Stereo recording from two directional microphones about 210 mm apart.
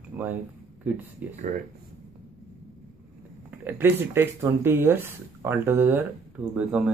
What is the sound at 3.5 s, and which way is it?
Speech, 10° right (ahead or behind).